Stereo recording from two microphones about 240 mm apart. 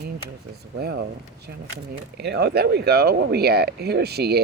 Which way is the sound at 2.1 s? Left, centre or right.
Right.